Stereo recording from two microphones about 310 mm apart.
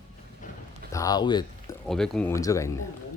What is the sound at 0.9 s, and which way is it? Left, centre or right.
Speech, centre.